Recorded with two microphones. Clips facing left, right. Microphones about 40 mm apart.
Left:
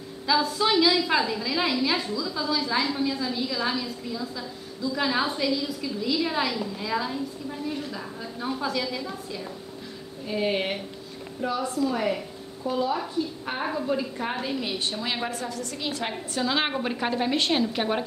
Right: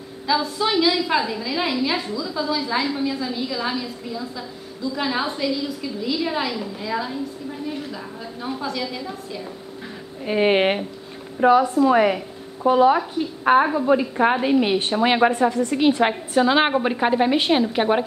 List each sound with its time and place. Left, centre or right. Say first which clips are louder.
0.3 s a woman's voice: right 2 dB; centre
10.2 s a woman's voice: right 9 dB; right
11.6 s a woman's voice: right 8 dB; right
11.9 s a woman's voice: right 9 dB; right
13.9 s a woman's voice: right 10 dB; right
15.5 s a woman's voice: right 13 dB; right